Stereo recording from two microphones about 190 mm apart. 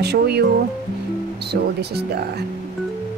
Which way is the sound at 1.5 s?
60° right (ahead or behind).